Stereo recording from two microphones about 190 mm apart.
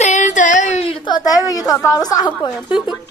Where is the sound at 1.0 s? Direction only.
20° left (ahead or behind).